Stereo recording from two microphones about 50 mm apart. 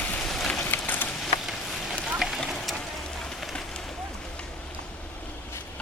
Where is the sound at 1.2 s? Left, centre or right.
Centre.